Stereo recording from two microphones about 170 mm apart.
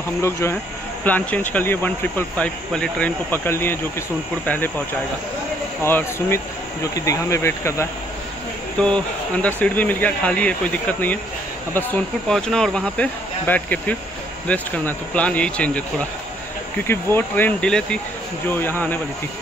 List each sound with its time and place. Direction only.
0.2 s speech: 15° left (ahead or behind)
5.9 s speech: 15° left (ahead or behind)